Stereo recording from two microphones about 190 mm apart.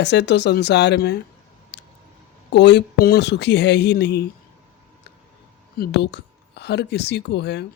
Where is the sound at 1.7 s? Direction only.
65° left (ahead or behind).